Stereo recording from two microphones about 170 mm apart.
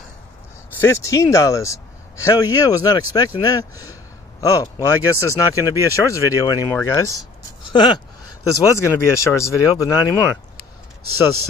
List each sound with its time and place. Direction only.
0.7 s a man's voice: 15° left (ahead or behind)
7.7 s a sound: 25° left (ahead or behind)
8.7 s speech: 15° left (ahead or behind)